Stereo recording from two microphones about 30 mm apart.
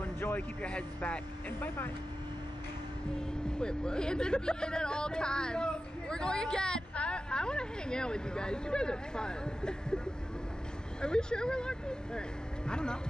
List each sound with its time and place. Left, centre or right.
0.0 s a sound: left
0.6 s speech: left
3.2 s speech: left
11.0 s speech: left